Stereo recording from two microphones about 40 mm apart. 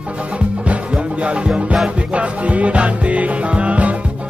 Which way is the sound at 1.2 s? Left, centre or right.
Right.